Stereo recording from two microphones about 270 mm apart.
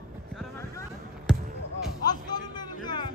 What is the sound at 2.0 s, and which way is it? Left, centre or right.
A man's voice, centre.